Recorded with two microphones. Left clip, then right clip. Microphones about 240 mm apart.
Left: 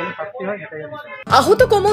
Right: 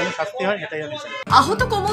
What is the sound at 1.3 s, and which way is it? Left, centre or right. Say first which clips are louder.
Speech: left 4 dB; centre.